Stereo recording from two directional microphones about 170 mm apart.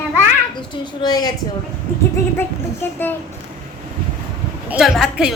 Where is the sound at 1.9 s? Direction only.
15° left (ahead or behind).